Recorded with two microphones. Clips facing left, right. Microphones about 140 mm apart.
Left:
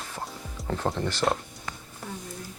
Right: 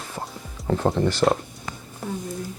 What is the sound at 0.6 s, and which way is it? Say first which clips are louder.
Music: right 7 dB; centre (ahead or behind).